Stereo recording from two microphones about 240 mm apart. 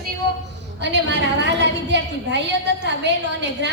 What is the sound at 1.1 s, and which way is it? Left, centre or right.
A woman's voice, right.